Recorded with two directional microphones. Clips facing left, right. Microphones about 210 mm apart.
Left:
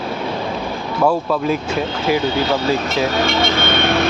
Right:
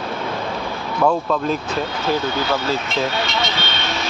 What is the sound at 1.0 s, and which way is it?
Speech, 10° left (ahead or behind).